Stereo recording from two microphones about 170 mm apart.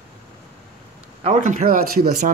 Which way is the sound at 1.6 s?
60° right (ahead or behind).